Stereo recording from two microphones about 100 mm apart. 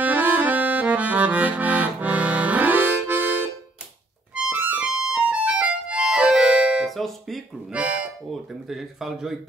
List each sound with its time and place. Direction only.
0.0 s music: 15° right (ahead or behind)
4.5 s music: 15° right (ahead or behind); by 7.4 s centre (ahead or behind)
7.7 s music: 15° right (ahead or behind)
8.3 s speech: centre (ahead or behind)